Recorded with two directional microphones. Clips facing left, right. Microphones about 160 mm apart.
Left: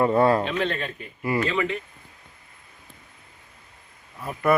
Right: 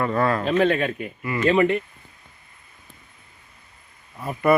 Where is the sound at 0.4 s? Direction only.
50° right (ahead or behind).